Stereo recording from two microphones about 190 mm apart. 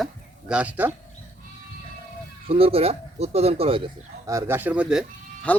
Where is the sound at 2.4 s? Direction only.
30° right (ahead or behind).